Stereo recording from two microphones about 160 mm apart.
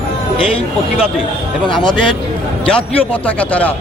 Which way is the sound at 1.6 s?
5° left (ahead or behind).